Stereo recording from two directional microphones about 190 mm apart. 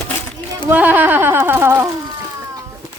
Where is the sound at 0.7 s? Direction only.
10° right (ahead or behind).